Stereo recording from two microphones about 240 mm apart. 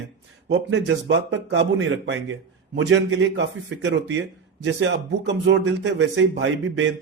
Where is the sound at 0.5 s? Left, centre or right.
Right.